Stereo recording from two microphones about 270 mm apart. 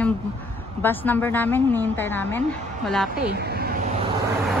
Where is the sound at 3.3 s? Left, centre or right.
Right.